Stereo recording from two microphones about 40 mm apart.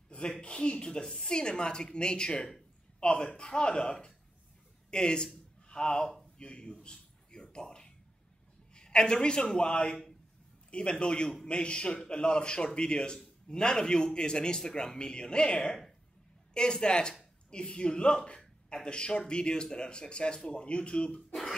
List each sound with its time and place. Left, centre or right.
0.1 s a woman's voice: left
6.3 s a sound: left
8.7 s speech: left
21.3 s speech: centre